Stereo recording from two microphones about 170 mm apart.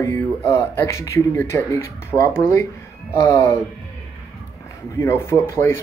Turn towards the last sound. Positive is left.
turn(degrees=15)  # may be behind; listen again after turning